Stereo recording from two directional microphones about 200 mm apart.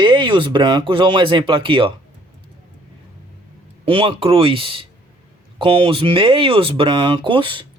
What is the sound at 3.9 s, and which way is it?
Speech, 25° right (ahead or behind).